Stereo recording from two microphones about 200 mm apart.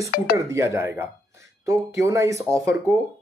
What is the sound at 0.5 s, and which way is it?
Speech, 15° right (ahead or behind).